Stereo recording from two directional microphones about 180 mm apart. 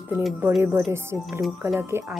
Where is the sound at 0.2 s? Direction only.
Centre (ahead or behind).